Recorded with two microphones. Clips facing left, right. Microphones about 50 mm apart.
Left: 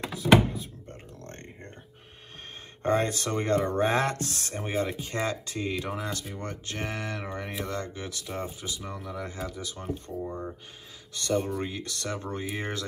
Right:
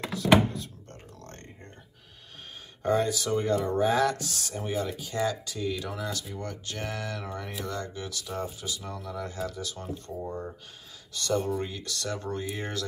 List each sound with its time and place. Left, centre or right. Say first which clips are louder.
0.1 s thunk: left 1 dB; centre
2.8 s speech: even; left; by 10.3 s centre
11.2 s speech: even; left